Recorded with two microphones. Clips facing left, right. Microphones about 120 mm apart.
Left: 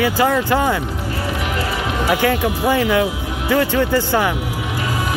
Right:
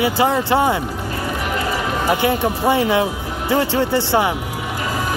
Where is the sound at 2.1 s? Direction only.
20° right (ahead or behind).